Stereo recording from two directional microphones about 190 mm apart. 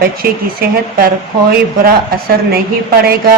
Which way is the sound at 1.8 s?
55° right (ahead or behind).